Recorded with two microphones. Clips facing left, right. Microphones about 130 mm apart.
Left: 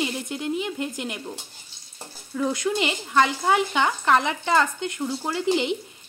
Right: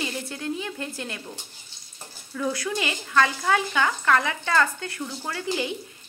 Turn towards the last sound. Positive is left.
turn(degrees=20)  # may be behind; listen again after turning